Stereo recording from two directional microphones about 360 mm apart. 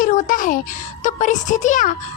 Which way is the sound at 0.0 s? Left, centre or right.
Left.